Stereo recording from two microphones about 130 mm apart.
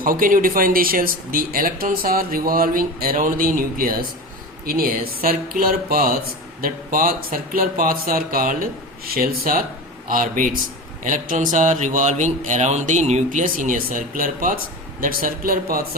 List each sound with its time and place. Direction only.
0.0 s speech: 90° right
5.5 s a man's voice: 90° right